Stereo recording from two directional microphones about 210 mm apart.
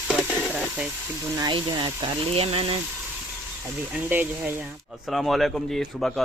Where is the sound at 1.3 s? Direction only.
20° right (ahead or behind).